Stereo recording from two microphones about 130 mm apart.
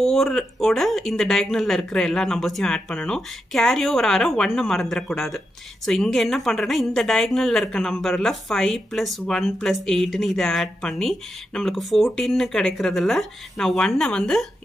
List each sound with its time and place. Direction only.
0.0 s a woman's voice: centre (ahead or behind)